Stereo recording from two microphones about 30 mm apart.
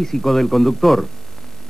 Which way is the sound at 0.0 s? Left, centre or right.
Centre.